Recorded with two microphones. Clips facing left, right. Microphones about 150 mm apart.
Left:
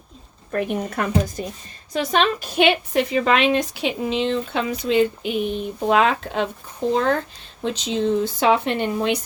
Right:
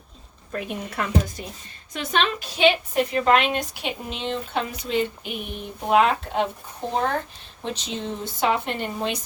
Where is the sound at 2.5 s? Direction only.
55° left (ahead or behind).